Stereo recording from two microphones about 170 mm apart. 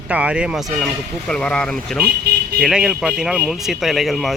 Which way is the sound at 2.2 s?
70° right (ahead or behind).